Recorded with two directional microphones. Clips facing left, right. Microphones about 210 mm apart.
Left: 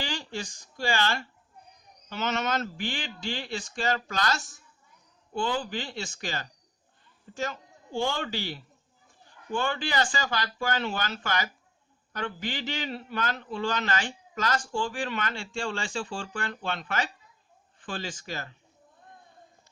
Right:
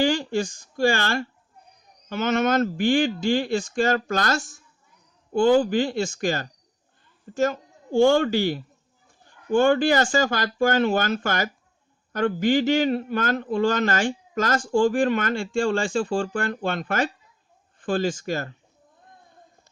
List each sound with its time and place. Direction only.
0.0 s a man's voice: 50° right (ahead or behind)